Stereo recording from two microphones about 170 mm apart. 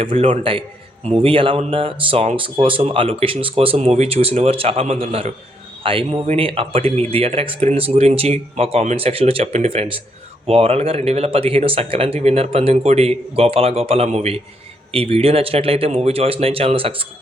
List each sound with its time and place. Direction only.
0.0 s speech: 30° right (ahead or behind)